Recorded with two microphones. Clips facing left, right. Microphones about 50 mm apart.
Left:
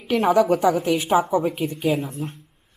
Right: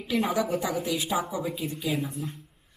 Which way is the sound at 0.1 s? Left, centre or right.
Left.